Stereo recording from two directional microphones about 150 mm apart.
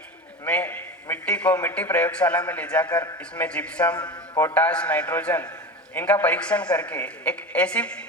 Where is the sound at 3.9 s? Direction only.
30° left (ahead or behind).